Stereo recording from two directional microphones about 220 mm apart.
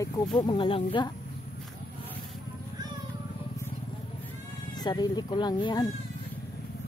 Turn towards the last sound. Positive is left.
turn(degrees=20)  # may be behind; listen again after turning